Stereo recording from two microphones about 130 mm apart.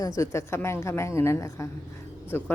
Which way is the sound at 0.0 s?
25° left (ahead or behind).